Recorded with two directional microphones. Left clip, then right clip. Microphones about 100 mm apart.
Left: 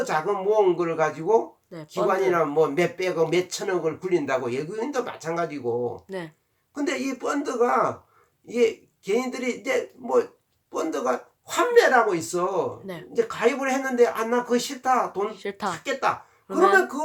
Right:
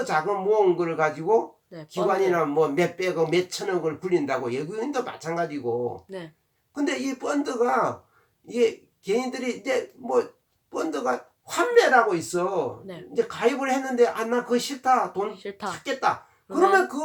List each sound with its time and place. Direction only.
0.0 s speech: 20° left (ahead or behind)
6.1 s speech: 40° left (ahead or behind)
6.7 s speech: 15° left (ahead or behind)
12.8 s speech: 40° left (ahead or behind)
13.1 s speech: 20° left (ahead or behind)
15.3 s speech: 45° left (ahead or behind)
15.7 s speech: 20° left (ahead or behind)